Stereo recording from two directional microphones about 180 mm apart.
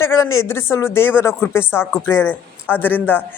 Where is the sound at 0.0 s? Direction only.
15° left (ahead or behind).